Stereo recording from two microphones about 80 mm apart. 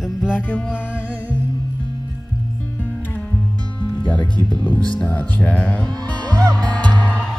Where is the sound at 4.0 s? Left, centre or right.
Centre.